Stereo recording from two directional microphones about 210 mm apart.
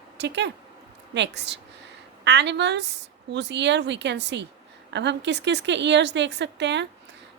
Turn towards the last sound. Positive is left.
turn(degrees=-55)  # may be behind; listen again after turning